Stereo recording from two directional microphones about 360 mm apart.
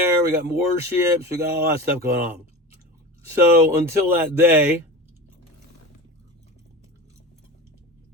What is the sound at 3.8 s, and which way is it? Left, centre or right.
Speech, centre.